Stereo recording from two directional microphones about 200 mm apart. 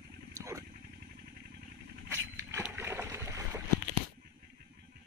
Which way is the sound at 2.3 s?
10° right (ahead or behind).